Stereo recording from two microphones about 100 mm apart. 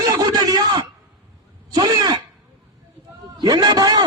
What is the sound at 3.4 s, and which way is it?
Speech, 45° right (ahead or behind).